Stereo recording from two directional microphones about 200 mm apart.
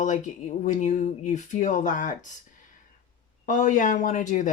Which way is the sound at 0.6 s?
35° left (ahead or behind).